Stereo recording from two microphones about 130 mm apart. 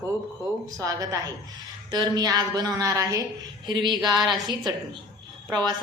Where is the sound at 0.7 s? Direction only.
25° right (ahead or behind).